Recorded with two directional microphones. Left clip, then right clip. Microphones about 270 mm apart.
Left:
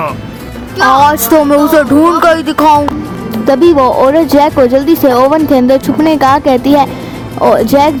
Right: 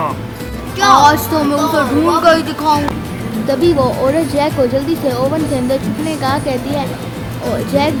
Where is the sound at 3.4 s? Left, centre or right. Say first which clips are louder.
Left 7 dB; left.